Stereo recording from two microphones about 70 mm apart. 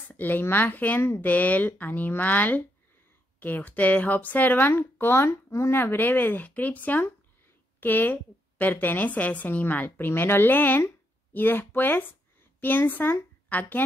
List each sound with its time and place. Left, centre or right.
0.1 s speech: left
1.3 s a woman's voice: left